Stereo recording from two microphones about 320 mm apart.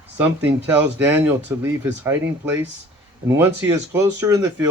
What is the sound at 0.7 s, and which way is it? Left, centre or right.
Speech, centre.